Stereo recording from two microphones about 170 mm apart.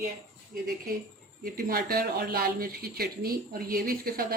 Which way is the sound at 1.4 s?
60° right (ahead or behind).